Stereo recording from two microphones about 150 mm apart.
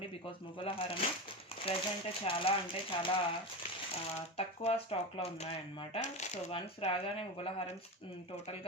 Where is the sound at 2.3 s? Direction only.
40° left (ahead or behind).